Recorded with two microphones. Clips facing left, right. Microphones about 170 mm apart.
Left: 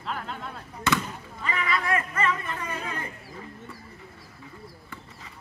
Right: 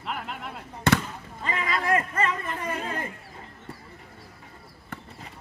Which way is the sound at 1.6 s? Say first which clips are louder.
Right 2 dB; 40° right (ahead or behind).